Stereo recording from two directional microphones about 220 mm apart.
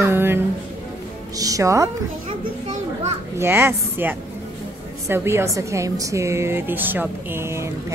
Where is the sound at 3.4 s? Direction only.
10° right (ahead or behind).